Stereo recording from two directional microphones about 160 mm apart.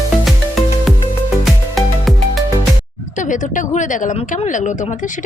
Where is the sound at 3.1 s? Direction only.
50° left (ahead or behind).